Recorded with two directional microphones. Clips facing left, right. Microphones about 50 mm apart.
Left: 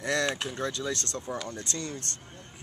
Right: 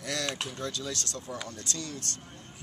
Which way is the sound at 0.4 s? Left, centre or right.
Left.